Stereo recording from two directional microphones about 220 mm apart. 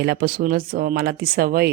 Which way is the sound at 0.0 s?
45° right (ahead or behind).